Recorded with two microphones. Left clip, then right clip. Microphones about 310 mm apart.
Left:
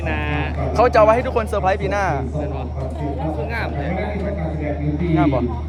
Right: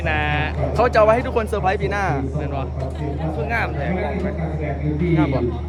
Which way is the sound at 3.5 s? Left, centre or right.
Right.